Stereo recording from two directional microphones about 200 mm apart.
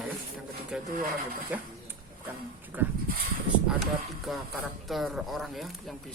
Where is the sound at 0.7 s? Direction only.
5° right (ahead or behind).